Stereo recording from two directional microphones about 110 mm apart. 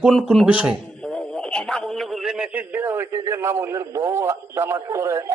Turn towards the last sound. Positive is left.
turn(degrees=-25)  # may be behind; listen again after turning